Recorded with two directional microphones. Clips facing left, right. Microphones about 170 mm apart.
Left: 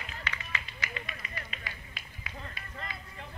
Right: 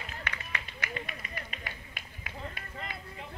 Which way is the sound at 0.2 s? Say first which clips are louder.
Left 1 dB; 55° right (ahead or behind).